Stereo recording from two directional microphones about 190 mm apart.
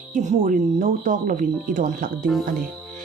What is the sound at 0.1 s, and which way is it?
Speech, 40° right (ahead or behind).